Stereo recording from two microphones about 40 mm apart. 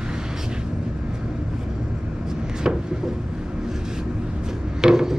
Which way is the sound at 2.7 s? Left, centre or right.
Right.